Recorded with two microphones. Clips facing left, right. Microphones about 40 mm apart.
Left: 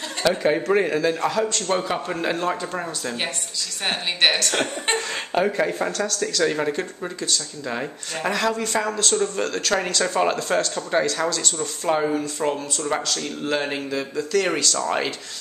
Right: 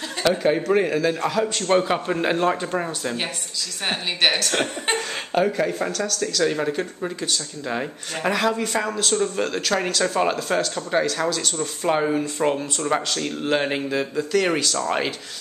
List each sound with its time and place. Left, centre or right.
0.2 s a woman's voice: centre
1.8 s speech: centre
3.8 s a woman's voice: centre
12.4 s speech: right; by 15.1 s centre